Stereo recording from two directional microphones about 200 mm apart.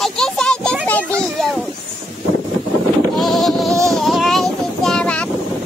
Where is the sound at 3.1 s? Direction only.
Centre (ahead or behind).